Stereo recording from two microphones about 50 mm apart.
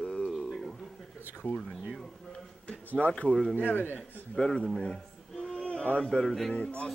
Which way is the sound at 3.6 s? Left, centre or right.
Left.